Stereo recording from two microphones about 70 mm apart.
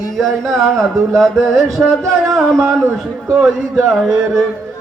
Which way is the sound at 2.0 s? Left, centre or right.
Right.